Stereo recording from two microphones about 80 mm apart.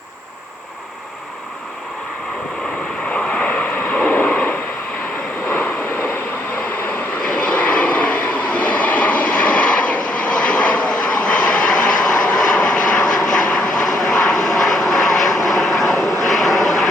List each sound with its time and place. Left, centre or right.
3.1 s vehicle: centre
7.3 s vehicle: centre